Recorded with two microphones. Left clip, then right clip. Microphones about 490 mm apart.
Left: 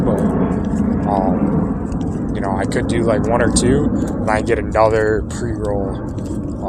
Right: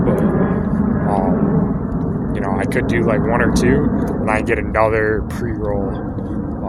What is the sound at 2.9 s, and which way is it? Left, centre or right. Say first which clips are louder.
Speech: left 1 dB; right.